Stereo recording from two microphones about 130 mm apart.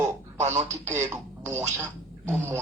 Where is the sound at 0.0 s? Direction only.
60° right (ahead or behind).